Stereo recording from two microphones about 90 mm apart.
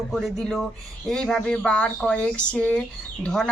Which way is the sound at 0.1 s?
Centre (ahead or behind).